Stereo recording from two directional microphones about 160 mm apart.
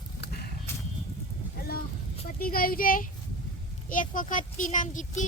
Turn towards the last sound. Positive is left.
turn(degrees=50)  # may be behind; listen again after turning